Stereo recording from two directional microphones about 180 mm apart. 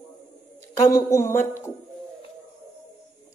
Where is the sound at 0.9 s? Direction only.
15° left (ahead or behind).